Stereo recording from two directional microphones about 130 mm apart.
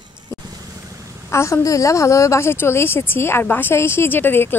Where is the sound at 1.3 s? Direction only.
20° left (ahead or behind).